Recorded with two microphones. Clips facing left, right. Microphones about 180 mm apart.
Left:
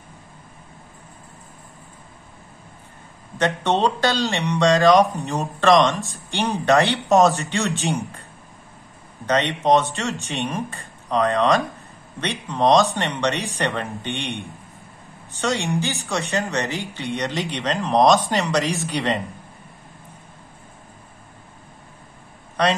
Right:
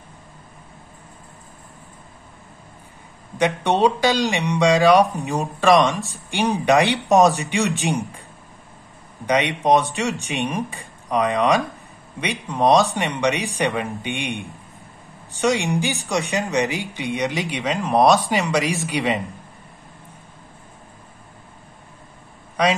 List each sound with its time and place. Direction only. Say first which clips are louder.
3.3 s speech: right 2 dB; 15° right (ahead or behind)
9.2 s speech: right 1 dB; 15° right (ahead or behind)
15.4 s speech: right 3 dB; 15° right (ahead or behind)
22.6 s speech: right 1 dB; 10° right (ahead or behind)